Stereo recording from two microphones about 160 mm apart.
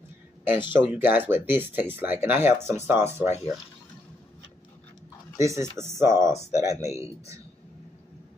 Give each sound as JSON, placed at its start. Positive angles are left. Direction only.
{"t": 0.7, "sound": "speech", "side_deg": -10}
{"t": 5.4, "sound": "speech", "side_deg": -20}